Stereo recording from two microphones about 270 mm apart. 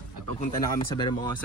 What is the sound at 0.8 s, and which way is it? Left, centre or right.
Speech, centre.